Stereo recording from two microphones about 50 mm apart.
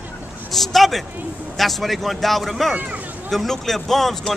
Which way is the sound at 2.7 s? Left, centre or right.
Right.